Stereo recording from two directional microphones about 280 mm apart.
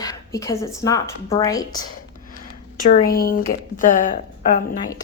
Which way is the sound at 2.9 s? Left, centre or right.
Left.